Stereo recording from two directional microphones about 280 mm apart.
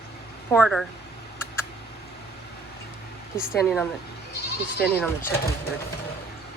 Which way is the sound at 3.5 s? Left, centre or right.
Centre.